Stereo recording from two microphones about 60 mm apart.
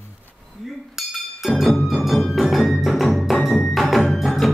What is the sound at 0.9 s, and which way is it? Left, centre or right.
Music, centre.